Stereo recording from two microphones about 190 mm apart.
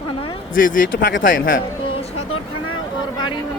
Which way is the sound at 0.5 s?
45° left (ahead or behind).